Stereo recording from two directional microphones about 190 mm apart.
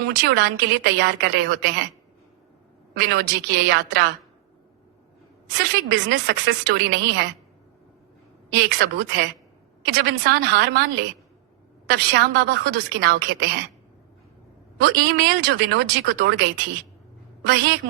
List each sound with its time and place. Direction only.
0.2 s a woman's voice: 60° right (ahead or behind)
2.9 s a woman's voice: 55° right (ahead or behind)
5.5 s a woman's voice: 55° right (ahead or behind)
8.5 s a woman's voice: 60° right (ahead or behind)
14.8 s a woman's voice: 55° right (ahead or behind)
17.4 s a woman's voice: 65° right (ahead or behind)